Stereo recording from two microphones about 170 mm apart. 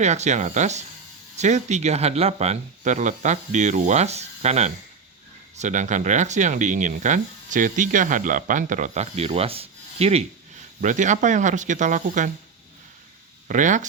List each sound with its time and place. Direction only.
0.0 s speech: 40° right (ahead or behind)
10.8 s speech: 45° right (ahead or behind)
13.5 s speech: 50° right (ahead or behind)